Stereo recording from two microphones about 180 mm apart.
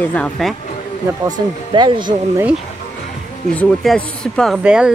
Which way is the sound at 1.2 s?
25° right (ahead or behind).